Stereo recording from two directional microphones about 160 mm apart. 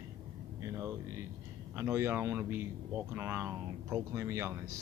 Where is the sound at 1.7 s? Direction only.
15° right (ahead or behind).